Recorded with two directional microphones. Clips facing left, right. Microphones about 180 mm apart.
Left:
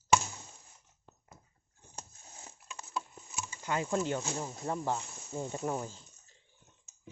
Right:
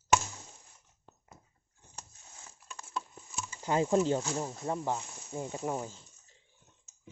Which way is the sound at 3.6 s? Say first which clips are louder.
Right 5 dB; 30° right (ahead or behind).